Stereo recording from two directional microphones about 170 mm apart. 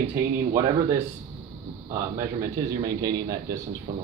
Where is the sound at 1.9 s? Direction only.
20° right (ahead or behind).